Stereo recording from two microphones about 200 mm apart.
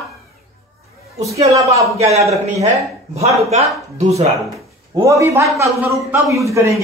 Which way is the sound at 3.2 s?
35° right (ahead or behind).